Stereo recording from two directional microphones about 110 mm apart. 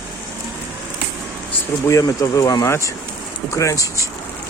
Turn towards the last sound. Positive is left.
turn(degrees=30)  # may be behind; listen again after turning